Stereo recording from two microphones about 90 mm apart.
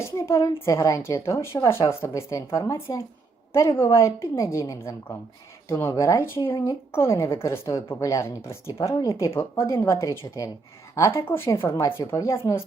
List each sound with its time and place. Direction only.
0.0 s a woman's voice: 35° left (ahead or behind)
3.8 s a woman's voice: 35° left (ahead or behind)